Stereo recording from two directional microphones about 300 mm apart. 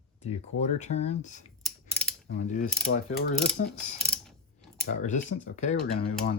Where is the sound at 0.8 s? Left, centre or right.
Left.